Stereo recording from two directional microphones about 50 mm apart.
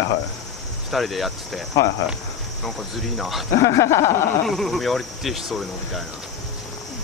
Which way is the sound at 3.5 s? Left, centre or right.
Left.